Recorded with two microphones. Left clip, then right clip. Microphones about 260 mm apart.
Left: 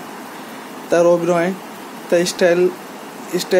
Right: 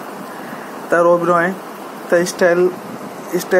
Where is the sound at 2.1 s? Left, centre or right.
Centre.